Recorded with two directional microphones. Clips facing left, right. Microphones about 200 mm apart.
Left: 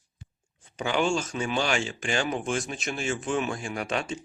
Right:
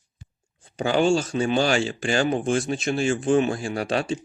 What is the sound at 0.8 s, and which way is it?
Speech, 35° right (ahead or behind).